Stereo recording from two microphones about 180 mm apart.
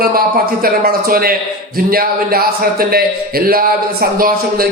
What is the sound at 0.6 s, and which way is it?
A man's voice, 55° right (ahead or behind).